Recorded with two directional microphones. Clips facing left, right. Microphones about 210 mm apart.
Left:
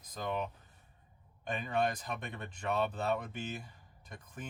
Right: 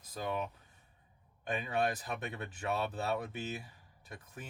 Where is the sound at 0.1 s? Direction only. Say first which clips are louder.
Even; 5° right (ahead or behind).